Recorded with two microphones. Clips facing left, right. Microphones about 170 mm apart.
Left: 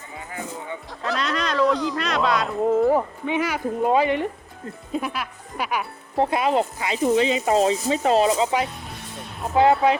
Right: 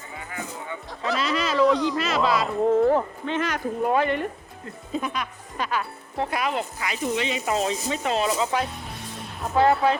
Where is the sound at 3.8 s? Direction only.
15° left (ahead or behind).